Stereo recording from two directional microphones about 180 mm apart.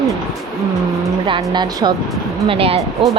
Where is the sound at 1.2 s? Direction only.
25° right (ahead or behind).